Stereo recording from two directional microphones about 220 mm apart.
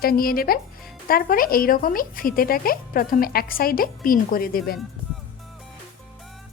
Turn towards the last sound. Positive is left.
turn(degrees=40)  # may be behind; listen again after turning